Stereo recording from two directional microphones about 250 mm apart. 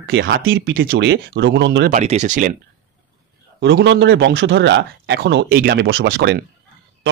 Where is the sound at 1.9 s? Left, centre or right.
Right.